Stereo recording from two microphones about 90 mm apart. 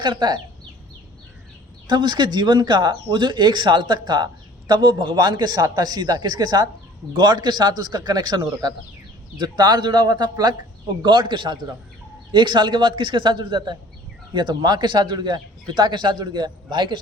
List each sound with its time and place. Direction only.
0.0 s speech: 55° right (ahead or behind)
1.9 s a man's voice: 55° right (ahead or behind)
11.0 s a man's voice: 65° right (ahead or behind)